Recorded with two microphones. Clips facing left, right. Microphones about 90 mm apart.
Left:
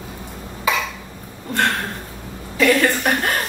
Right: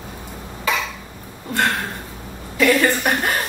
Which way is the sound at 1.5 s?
Centre (ahead or behind).